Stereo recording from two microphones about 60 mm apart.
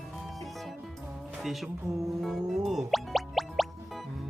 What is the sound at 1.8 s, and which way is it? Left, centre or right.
Music, right.